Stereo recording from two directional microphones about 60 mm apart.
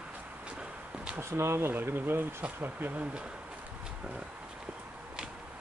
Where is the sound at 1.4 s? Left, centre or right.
Right.